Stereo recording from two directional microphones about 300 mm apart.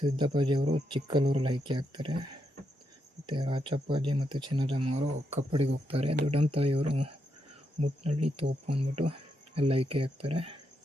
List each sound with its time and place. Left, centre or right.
0.0 s speech: centre
3.2 s speech: centre